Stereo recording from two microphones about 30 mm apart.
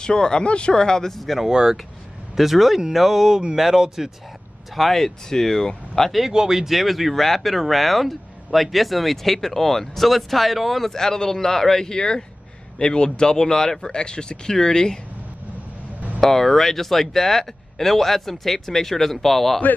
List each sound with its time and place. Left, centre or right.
0.0 s speech: left
0.8 s speech: left
1.1 s speech: centre
2.3 s speech: centre
4.7 s speech: centre
6.3 s speech: centre
6.7 s speech: centre
10.9 s speech: centre
16.2 s speech: centre